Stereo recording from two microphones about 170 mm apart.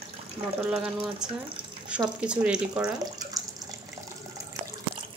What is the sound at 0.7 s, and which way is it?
Speech, 5° right (ahead or behind).